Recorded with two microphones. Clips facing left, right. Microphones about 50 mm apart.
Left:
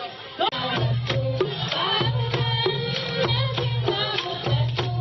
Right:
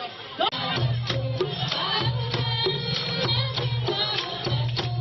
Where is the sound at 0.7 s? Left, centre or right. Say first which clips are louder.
Left 3 dB; centre.